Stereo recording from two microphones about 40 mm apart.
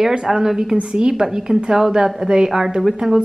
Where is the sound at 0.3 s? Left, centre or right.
Centre.